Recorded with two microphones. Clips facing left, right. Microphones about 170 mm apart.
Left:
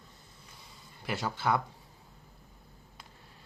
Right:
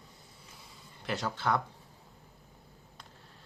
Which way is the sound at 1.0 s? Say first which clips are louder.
Left 1 dB; 10° left (ahead or behind).